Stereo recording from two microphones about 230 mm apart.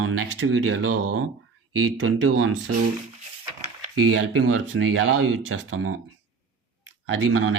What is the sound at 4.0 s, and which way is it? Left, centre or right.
Speech, right.